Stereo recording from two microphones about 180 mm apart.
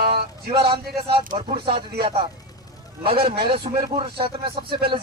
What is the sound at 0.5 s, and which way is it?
Speech, 30° right (ahead or behind).